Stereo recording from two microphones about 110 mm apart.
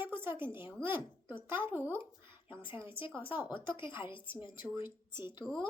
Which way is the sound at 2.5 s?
50° left (ahead or behind).